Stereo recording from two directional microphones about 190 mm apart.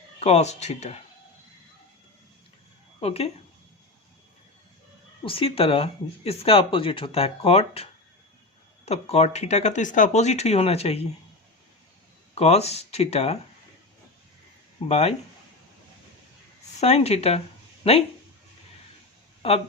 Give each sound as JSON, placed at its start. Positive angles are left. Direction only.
{"t": 0.2, "sound": "speech", "side_deg": 35}
{"t": 3.0, "sound": "speech", "side_deg": 30}
{"t": 5.2, "sound": "speech", "side_deg": 30}
{"t": 12.3, "sound": "speech", "side_deg": 35}
{"t": 14.8, "sound": "speech", "side_deg": 35}
{"t": 16.8, "sound": "speech", "side_deg": 35}
{"t": 19.4, "sound": "speech", "side_deg": 30}